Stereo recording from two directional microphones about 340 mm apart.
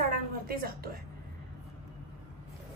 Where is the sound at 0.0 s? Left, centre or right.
Right.